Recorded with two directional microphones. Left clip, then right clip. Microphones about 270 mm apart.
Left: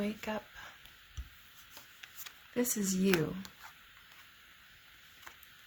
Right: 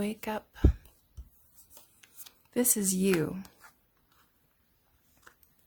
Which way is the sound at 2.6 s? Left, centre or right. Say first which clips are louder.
Right 4 dB; right.